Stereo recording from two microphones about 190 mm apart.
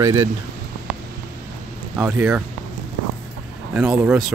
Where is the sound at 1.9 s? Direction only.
10° right (ahead or behind).